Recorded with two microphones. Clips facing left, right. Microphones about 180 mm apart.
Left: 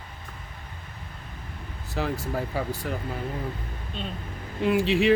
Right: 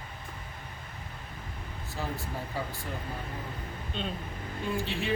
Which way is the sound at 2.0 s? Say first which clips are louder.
Left 8 dB; 90° left.